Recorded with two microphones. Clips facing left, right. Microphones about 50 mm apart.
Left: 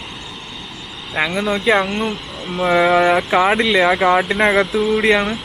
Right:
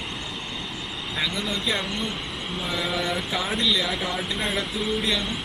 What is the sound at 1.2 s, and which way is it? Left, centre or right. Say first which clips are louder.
A man's voice: left 10 dB; left.